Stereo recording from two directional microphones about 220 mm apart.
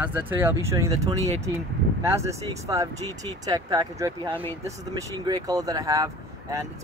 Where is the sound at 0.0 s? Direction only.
10° right (ahead or behind).